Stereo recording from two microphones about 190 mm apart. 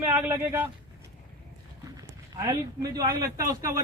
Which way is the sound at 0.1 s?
15° right (ahead or behind).